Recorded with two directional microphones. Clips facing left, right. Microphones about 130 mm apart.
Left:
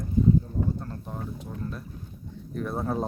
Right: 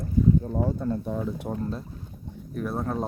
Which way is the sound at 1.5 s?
55° right (ahead or behind).